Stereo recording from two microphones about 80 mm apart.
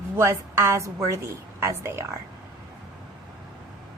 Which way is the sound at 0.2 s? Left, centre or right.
Right.